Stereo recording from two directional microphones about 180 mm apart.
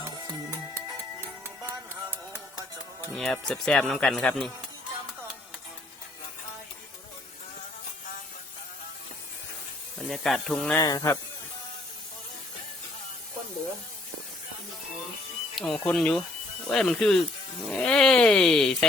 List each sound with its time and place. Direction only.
1.2 s music: 15° right (ahead or behind)
3.1 s speech: centre (ahead or behind)
10.1 s speech: centre (ahead or behind)
10.8 s speech: 20° left (ahead or behind)
15.5 s speech: 5° left (ahead or behind)